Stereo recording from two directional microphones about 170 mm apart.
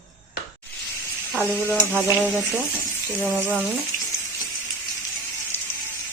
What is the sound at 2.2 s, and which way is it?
Speech, 10° left (ahead or behind).